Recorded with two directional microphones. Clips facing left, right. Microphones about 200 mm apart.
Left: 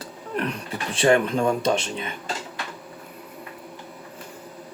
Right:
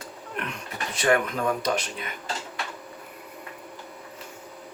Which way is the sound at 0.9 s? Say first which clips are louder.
Left 4 dB; 30° left (ahead or behind).